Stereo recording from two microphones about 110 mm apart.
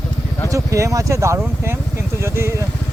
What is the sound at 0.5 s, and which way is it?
Speech, 30° right (ahead or behind).